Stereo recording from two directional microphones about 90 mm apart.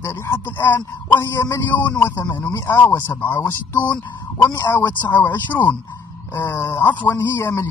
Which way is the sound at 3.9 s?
10° left (ahead or behind).